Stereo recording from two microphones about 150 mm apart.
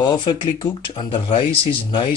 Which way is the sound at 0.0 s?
30° left (ahead or behind).